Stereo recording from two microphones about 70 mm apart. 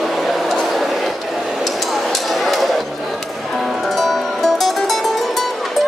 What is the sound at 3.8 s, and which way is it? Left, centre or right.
Music, centre.